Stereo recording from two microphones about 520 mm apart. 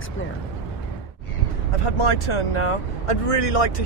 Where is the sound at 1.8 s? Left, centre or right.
Left.